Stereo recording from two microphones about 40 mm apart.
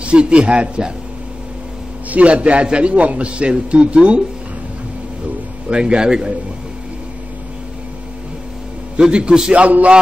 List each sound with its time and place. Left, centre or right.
0.0 s a man's voice: right
2.0 s a man's voice: right
5.7 s a man's voice: right
8.9 s a man's voice: right
9.5 s speech: right